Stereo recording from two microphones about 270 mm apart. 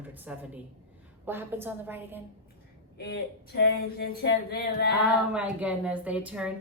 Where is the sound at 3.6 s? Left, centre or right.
Left.